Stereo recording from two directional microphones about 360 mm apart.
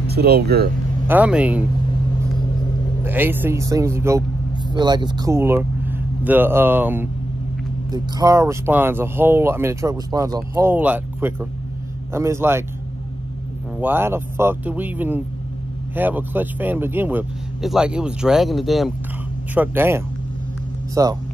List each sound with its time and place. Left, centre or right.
0.0 s speech: right
1.0 s speech: centre
3.0 s speech: centre
13.7 s speech: centre